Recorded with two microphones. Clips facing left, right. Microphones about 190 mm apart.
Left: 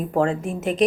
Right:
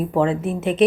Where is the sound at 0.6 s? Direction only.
40° left (ahead or behind).